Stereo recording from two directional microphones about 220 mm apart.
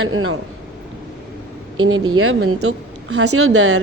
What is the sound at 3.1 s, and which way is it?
Speech, 90° right.